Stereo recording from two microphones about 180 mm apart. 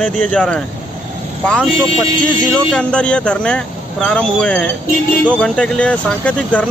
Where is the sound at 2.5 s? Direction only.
5° left (ahead or behind).